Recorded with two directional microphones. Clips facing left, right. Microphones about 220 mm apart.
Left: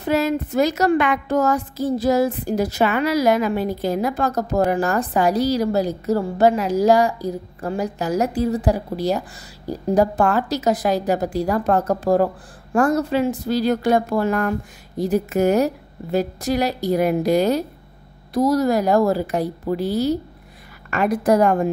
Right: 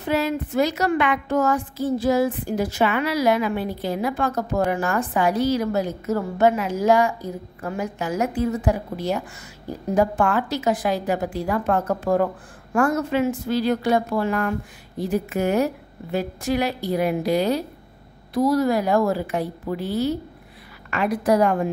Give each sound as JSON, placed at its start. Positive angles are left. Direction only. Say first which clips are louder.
{"t": 0.0, "sound": "a woman's voice", "louder": "left 3 dB", "side_deg": 40}